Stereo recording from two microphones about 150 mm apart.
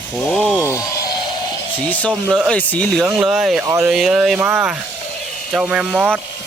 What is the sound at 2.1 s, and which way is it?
Speech, centre (ahead or behind).